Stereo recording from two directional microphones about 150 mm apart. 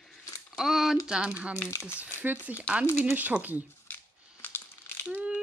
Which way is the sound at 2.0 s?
10° right (ahead or behind).